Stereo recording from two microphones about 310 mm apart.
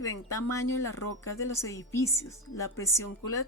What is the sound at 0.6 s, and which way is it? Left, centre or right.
Speech, left.